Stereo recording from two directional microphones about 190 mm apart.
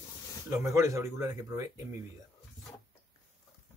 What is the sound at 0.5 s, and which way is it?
Speech, 15° right (ahead or behind).